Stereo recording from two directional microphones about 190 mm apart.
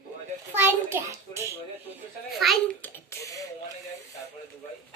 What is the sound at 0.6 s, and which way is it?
Speech, 15° right (ahead or behind).